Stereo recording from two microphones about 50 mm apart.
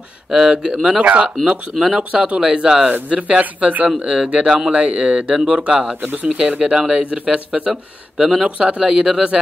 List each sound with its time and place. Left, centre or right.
0.3 s speech: centre
2.9 s speech: right; by 8.5 s centre
8.5 s speech: right